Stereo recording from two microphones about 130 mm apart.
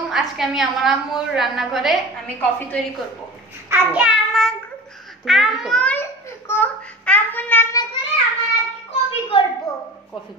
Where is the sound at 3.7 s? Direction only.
15° right (ahead or behind).